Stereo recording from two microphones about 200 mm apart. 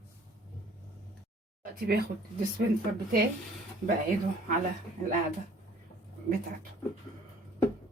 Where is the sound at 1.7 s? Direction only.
50° right (ahead or behind).